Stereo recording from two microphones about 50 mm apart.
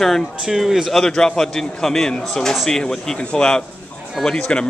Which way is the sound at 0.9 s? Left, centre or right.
Centre.